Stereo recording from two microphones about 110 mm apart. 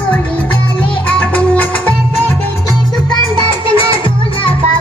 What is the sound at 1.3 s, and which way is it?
Music, 15° left (ahead or behind).